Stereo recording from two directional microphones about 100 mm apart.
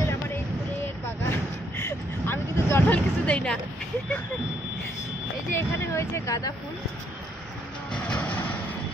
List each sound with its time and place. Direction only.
1.2 s vehicle: 20° left (ahead or behind)
2.9 s speech: 10° left (ahead or behind)
5.5 s speech: 25° left (ahead or behind)
7.9 s music: 10° left (ahead or behind)